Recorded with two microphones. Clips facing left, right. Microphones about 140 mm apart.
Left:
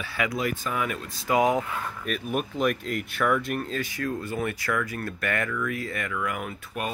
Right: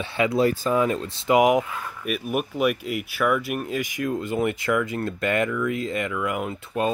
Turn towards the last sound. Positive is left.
turn(degrees=-25)  # may be behind; listen again after turning